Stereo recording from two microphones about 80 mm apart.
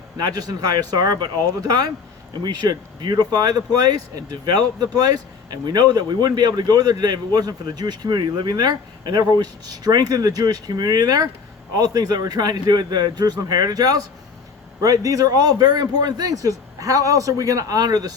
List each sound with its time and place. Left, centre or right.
0.2 s a man's voice: right